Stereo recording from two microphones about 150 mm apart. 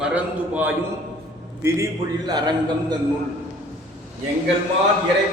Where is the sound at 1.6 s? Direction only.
25° right (ahead or behind).